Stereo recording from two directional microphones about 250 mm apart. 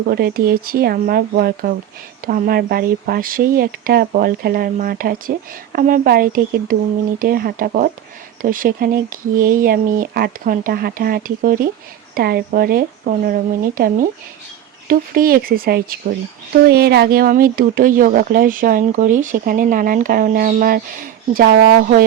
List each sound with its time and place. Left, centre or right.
0.1 s speech: right